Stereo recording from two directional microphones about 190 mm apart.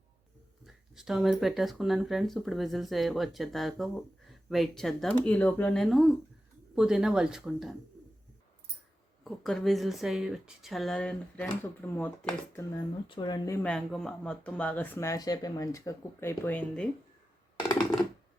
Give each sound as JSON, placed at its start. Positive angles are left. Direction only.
{"t": 0.6, "sound": "speech", "side_deg": 0}
{"t": 9.2, "sound": "speech", "side_deg": 0}
{"t": 13.1, "sound": "speech", "side_deg": 25}
{"t": 13.7, "sound": "speech", "side_deg": 5}